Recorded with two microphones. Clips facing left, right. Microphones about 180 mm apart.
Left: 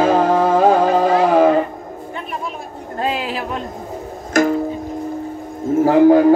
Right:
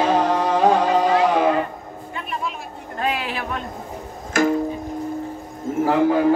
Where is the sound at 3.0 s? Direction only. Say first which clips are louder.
Left 3 dB; 30° left (ahead or behind).